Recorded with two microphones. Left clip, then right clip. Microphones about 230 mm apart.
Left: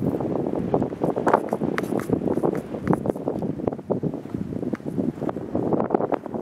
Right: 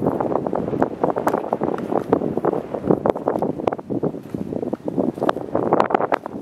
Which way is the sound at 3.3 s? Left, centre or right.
Right.